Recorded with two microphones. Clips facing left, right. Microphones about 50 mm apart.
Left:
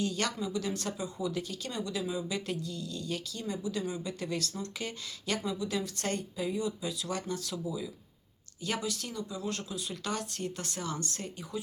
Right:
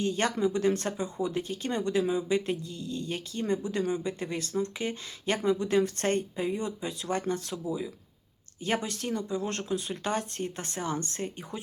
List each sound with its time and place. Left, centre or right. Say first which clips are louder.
0.0 s speech: right 5 dB; right